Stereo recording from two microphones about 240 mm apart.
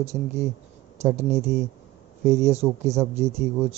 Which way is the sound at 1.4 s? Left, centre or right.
Centre.